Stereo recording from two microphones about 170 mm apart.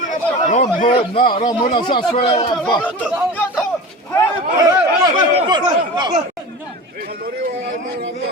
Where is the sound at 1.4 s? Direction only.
25° left (ahead or behind).